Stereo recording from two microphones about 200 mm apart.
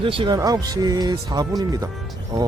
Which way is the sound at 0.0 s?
25° right (ahead or behind).